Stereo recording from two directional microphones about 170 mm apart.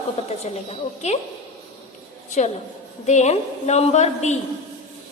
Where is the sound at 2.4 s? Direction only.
45° left (ahead or behind).